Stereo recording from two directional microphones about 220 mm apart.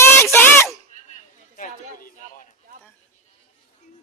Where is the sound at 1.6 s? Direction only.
40° left (ahead or behind).